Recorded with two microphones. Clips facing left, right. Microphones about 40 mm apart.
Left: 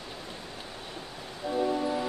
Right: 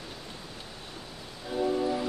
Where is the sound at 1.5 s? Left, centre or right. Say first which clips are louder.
Right 1 dB; centre.